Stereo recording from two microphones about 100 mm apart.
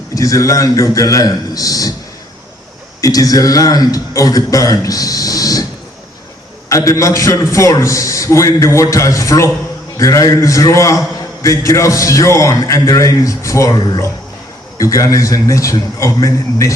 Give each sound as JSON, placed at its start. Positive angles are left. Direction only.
{"t": 0.1, "sound": "a man's voice", "side_deg": 35}
{"t": 3.0, "sound": "a man's voice", "side_deg": 35}
{"t": 6.7, "sound": "a man's voice", "side_deg": 30}
{"t": 13.7, "sound": "speech", "side_deg": 45}
{"t": 14.8, "sound": "a man's voice", "side_deg": 35}